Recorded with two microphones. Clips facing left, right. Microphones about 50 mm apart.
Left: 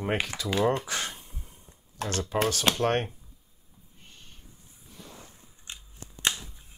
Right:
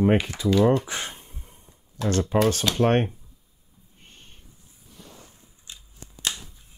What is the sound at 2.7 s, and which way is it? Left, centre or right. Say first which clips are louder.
Speech: right 5 dB; right.